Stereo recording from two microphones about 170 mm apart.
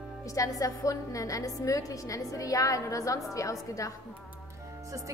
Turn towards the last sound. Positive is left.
turn(degrees=20)  # may be behind; listen again after turning